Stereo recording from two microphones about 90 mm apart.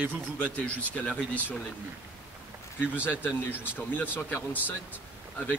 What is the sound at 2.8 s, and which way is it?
Speech, 20° left (ahead or behind).